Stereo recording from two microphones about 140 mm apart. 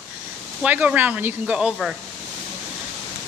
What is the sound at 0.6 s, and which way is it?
Speech, 10° right (ahead or behind).